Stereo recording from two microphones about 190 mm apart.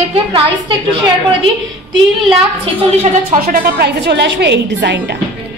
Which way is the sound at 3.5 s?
55° right (ahead or behind).